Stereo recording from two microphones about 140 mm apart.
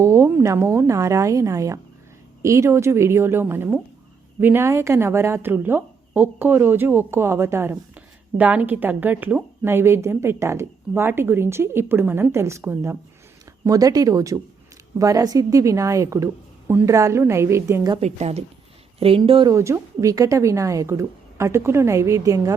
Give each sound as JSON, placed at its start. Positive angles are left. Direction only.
{"t": 0.0, "sound": "a woman's voice", "side_deg": -20}
{"t": 18.0, "sound": "a woman's voice", "side_deg": -50}
{"t": 19.5, "sound": "speech", "side_deg": -20}